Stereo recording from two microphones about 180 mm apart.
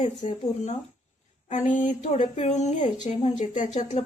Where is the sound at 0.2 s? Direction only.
40° left (ahead or behind).